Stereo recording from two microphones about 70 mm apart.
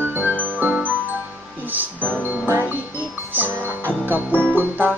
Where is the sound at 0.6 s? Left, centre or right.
Right.